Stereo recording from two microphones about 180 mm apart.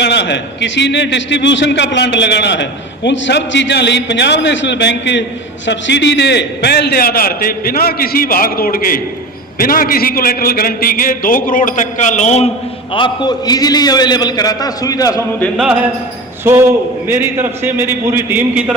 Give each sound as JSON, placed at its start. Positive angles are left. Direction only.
{"t": 0.0, "sound": "a man's voice", "side_deg": 70}
{"t": 12.9, "sound": "a man's voice", "side_deg": 25}
{"t": 15.5, "sound": "a man's voice", "side_deg": -5}